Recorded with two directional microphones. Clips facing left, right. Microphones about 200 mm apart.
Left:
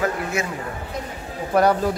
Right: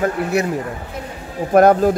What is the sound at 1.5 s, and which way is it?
Speech, 50° right (ahead or behind).